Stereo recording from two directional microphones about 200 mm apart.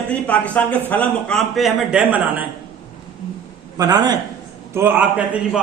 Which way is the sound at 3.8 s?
20° right (ahead or behind).